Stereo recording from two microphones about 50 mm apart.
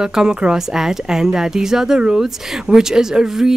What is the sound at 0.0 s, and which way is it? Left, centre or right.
Speech, centre.